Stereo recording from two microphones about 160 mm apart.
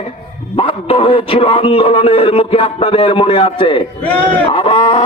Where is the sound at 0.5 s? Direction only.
35° left (ahead or behind).